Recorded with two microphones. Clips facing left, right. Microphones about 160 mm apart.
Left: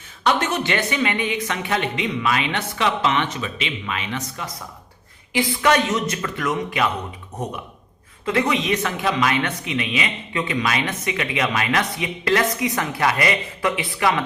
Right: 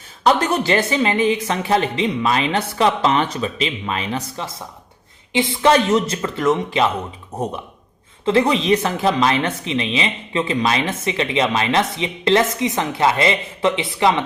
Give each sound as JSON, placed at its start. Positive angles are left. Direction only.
{"t": 0.3, "sound": "speech", "side_deg": -35}
{"t": 8.2, "sound": "speech", "side_deg": -30}